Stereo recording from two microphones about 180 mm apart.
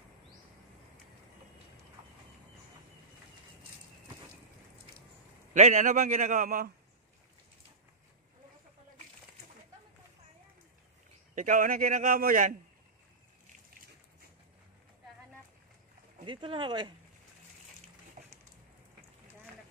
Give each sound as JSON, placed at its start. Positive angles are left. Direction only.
{"t": 5.5, "sound": "a man's voice", "side_deg": -40}
{"t": 11.3, "sound": "a man's voice", "side_deg": -45}
{"t": 16.3, "sound": "speech", "side_deg": -25}